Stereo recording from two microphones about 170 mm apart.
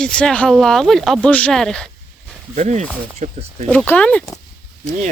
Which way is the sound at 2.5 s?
45° right (ahead or behind).